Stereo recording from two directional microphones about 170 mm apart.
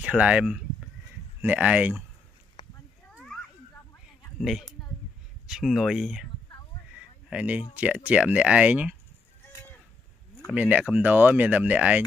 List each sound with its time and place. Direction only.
0.0 s speech: 5° right (ahead or behind)
2.6 s a sound: 30° left (ahead or behind)
3.1 s children playing: centre (ahead or behind)
4.4 s a woman's voice: centre (ahead or behind)
7.0 s a sound: 5° right (ahead or behind)
7.7 s speech: 10° right (ahead or behind)
10.5 s speech: 10° right (ahead or behind)